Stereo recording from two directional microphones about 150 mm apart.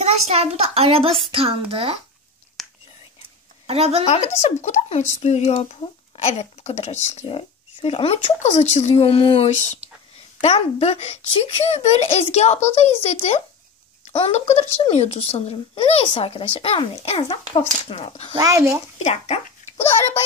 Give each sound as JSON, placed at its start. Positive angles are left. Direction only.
{"t": 0.0, "sound": "a child's voice", "side_deg": -45}
{"t": 2.6, "sound": "whispering", "side_deg": 0}
{"t": 3.6, "sound": "speech", "side_deg": -40}
{"t": 4.0, "sound": "speech", "side_deg": 45}
{"t": 18.4, "sound": "speech", "side_deg": -20}
{"t": 19.0, "sound": "speech", "side_deg": 45}